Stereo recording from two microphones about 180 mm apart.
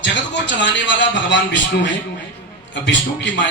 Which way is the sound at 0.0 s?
85° left.